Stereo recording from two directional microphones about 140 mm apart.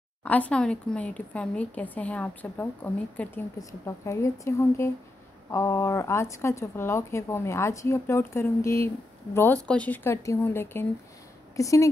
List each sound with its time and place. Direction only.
0.2 s a woman's voice: 10° left (ahead or behind)